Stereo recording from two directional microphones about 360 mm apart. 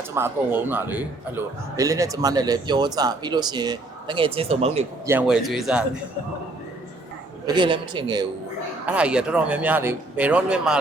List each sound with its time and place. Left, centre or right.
0.1 s speech: centre
5.1 s speech: centre
7.4 s speech: centre